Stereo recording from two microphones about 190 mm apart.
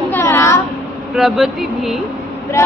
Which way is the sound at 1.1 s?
Centre (ahead or behind).